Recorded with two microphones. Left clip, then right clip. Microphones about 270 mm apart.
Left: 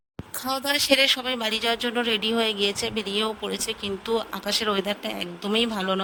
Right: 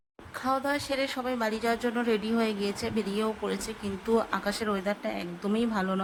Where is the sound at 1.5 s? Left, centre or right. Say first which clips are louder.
Left 4 dB; left.